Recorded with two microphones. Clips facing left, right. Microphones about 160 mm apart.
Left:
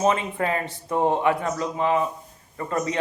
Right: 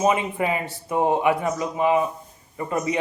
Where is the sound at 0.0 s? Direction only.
15° right (ahead or behind).